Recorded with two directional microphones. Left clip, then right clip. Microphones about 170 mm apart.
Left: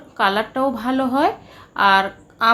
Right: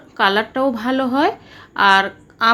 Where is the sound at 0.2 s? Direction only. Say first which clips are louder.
Right 2 dB; 15° right (ahead or behind).